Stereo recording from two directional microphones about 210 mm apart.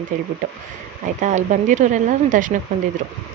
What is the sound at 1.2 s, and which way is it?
Speech, 35° right (ahead or behind).